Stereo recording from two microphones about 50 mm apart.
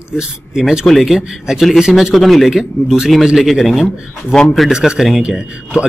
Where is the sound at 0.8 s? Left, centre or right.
Centre.